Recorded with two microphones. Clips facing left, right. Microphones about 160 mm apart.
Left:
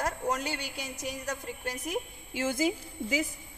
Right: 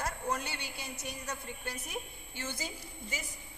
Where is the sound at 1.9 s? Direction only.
90° left.